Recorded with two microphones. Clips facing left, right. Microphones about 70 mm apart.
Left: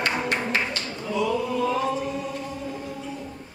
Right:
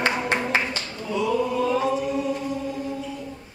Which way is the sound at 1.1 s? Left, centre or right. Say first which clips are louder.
Right 2 dB; centre.